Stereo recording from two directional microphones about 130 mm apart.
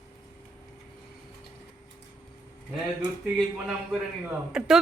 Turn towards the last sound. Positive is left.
turn(degrees=-5)  # may be behind; listen again after turning